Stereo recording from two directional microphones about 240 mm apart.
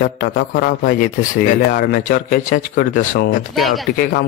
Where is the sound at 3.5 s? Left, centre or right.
Centre.